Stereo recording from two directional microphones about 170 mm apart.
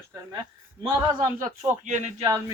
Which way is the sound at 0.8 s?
20° right (ahead or behind).